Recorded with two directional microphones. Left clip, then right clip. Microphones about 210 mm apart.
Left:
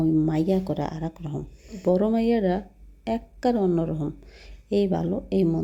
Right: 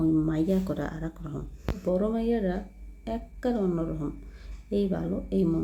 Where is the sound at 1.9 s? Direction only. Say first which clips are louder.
Left 5 dB; 30° left (ahead or behind).